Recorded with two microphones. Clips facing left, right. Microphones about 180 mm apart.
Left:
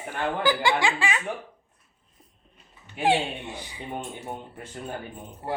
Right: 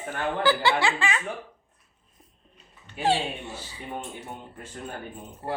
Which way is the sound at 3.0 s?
15° left (ahead or behind).